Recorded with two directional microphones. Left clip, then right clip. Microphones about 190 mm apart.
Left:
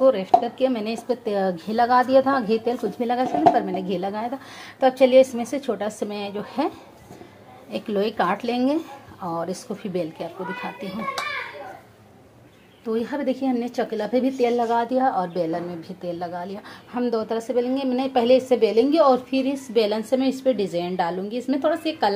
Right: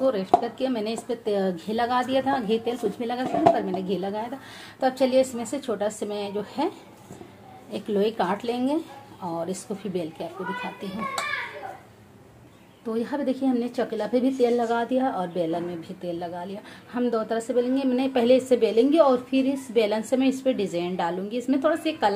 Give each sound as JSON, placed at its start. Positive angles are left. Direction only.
{"t": 0.0, "sound": "a woman's voice", "side_deg": 10}
{"t": 7.7, "sound": "a woman's voice", "side_deg": 10}
{"t": 9.9, "sound": "a woman's voice", "side_deg": 10}
{"t": 12.8, "sound": "a woman's voice", "side_deg": 10}